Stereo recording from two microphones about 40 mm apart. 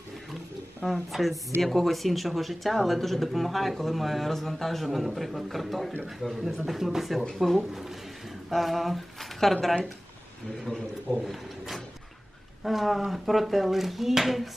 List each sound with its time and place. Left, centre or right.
0.9 s speech: centre
6.3 s speech: centre
10.7 s a man's voice: left
11.2 s a sound: centre
12.6 s speech: centre